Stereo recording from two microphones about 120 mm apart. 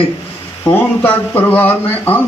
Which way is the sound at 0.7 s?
15° left (ahead or behind).